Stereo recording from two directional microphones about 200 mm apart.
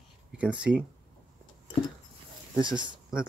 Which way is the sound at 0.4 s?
5° right (ahead or behind).